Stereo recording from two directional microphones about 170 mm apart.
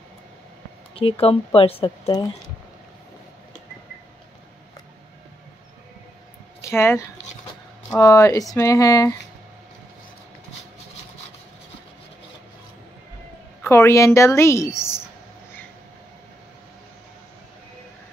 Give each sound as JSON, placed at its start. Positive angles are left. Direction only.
{"t": 0.9, "sound": "speech", "side_deg": 35}
{"t": 6.6, "sound": "speech", "side_deg": 15}
{"t": 13.7, "sound": "a woman's voice", "side_deg": 15}